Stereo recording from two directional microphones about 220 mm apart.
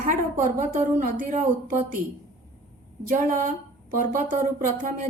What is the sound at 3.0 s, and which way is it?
A woman's voice, 35° right (ahead or behind).